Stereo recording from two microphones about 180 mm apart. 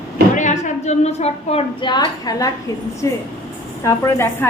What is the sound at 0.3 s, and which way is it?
A woman's voice, 45° left (ahead or behind).